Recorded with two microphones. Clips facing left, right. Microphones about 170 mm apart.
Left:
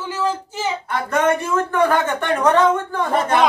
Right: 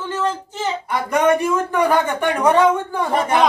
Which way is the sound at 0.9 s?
15° right (ahead or behind).